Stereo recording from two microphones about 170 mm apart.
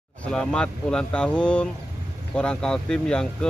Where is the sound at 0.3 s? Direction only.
5° left (ahead or behind).